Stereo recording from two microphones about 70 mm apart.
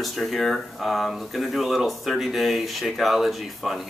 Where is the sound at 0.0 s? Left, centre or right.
Centre.